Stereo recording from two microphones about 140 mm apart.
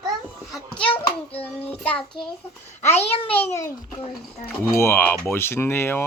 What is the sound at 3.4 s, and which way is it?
Speech, 20° left (ahead or behind).